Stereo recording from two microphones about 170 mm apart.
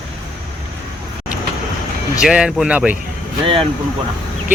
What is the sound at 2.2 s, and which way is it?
Speech, 5° right (ahead or behind).